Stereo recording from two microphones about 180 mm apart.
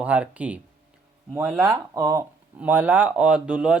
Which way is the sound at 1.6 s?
20° right (ahead or behind).